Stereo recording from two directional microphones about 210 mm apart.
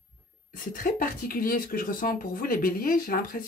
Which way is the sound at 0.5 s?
40° left (ahead or behind).